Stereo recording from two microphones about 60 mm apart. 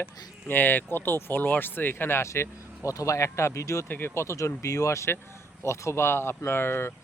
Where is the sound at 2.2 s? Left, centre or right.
Left.